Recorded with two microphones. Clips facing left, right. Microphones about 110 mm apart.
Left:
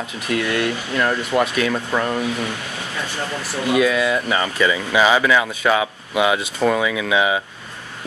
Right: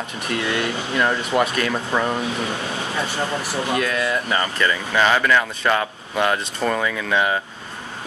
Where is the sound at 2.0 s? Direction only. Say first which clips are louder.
Left 1 dB; 25° right (ahead or behind).